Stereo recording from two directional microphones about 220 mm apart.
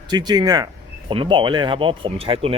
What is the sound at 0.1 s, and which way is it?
Speech, 20° right (ahead or behind).